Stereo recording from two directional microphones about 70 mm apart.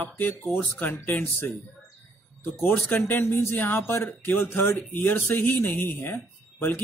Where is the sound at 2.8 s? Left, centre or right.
Left.